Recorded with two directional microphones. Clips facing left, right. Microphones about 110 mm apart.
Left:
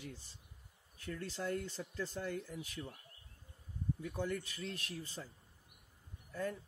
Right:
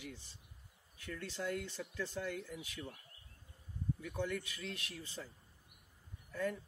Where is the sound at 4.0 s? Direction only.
30° left (ahead or behind).